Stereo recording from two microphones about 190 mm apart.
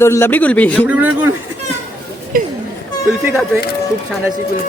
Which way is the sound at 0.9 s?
10° right (ahead or behind).